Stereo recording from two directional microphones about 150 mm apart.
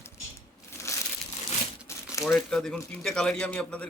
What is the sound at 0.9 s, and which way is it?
Crumpling, 20° left (ahead or behind).